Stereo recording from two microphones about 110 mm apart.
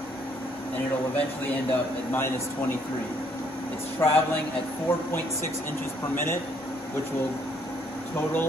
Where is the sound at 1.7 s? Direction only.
25° left (ahead or behind).